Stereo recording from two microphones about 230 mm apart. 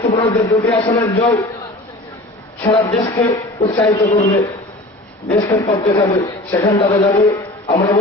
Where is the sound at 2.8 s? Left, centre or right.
Centre.